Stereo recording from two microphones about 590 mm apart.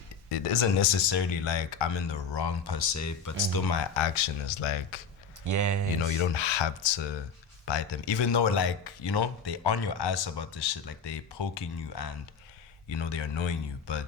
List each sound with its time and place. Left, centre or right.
0.3 s speech: left
2.9 s speech: left
4.6 s speech: left
5.5 s speech: right
6.0 s speech: left